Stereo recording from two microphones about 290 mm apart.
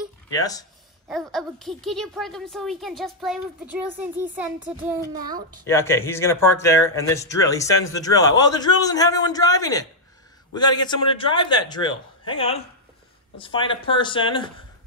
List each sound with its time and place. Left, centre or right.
0.3 s speech: centre
1.3 s speech: centre
5.7 s speech: centre